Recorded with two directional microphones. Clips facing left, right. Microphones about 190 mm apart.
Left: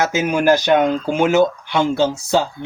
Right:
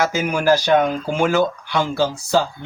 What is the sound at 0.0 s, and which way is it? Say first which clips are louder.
Speech: left 2 dB; 25° left (ahead or behind).